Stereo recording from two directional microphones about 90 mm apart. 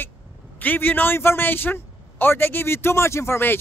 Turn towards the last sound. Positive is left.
turn(degrees=25)  # may be behind; listen again after turning